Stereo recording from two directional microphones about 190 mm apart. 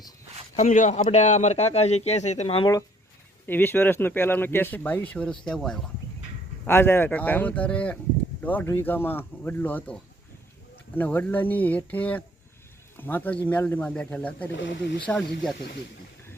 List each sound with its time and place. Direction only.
0.5 s a man's voice: 40° left (ahead or behind)
3.4 s speech: 10° left (ahead or behind)
14.5 s speech: 70° left (ahead or behind)